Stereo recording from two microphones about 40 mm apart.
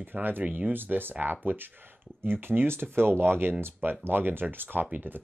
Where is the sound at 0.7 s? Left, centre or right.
Right.